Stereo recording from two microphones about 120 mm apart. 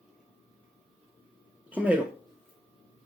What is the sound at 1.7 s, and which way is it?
Speech, 15° right (ahead or behind).